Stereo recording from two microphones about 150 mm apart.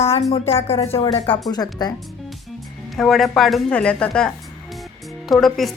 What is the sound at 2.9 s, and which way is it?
A woman's voice, centre (ahead or behind).